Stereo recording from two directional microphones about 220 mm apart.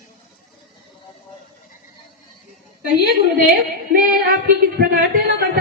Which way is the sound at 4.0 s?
40° right (ahead or behind).